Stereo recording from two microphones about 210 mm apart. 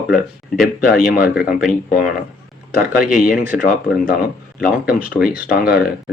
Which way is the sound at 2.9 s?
40° left (ahead or behind).